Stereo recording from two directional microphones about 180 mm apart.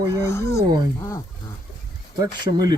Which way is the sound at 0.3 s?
15° left (ahead or behind).